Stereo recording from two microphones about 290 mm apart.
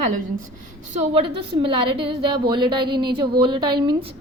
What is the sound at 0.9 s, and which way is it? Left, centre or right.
A woman's voice, right.